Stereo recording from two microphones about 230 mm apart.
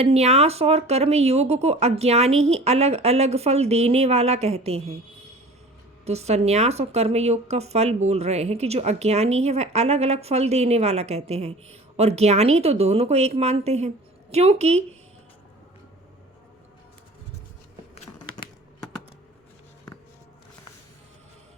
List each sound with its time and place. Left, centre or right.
0.0 s speech: right
6.1 s speech: right
17.9 s a sound: left